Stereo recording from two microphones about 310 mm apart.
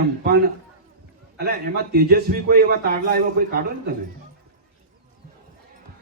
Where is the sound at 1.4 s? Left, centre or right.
Right.